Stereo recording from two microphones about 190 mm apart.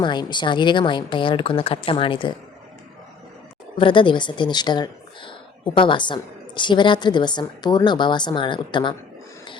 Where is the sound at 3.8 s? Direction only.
25° left (ahead or behind).